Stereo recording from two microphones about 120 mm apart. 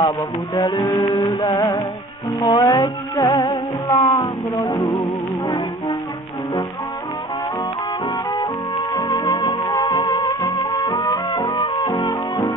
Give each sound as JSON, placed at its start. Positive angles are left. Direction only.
{"t": 0.6, "sound": "music", "side_deg": 35}
{"t": 8.3, "sound": "music", "side_deg": 35}